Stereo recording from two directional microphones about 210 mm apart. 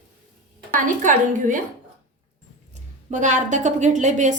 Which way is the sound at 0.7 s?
40° right (ahead or behind).